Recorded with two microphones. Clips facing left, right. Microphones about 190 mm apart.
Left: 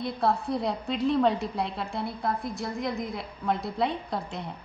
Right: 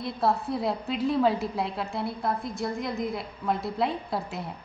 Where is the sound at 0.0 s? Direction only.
Centre (ahead or behind).